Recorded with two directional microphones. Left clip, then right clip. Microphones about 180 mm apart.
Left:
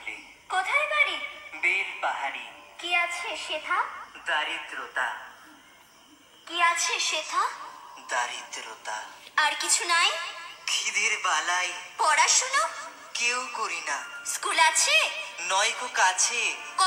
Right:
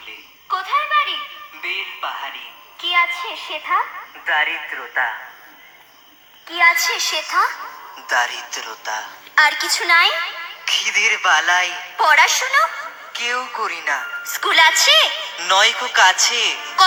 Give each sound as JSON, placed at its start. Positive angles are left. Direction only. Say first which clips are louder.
{"t": 0.5, "sound": "a sound", "louder": "right 7 dB", "side_deg": 10}
{"t": 1.6, "sound": "music", "louder": "right 1 dB", "side_deg": 10}
{"t": 2.8, "sound": "a child's voice", "louder": "right 9 dB", "side_deg": 10}
{"t": 3.2, "sound": "a woman's voice", "louder": "right 5 dB", "side_deg": -15}
{"t": 4.3, "sound": "speech", "louder": "right 9 dB", "side_deg": -30}
{"t": 6.6, "sound": "a woman's voice", "louder": "right 9 dB", "side_deg": -25}